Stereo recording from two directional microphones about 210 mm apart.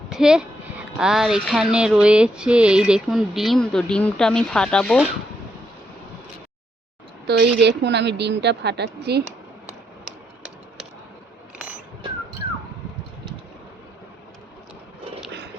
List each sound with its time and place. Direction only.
0.1 s a woman's voice: 5° right (ahead or behind)
7.3 s a woman's voice: 55° right (ahead or behind)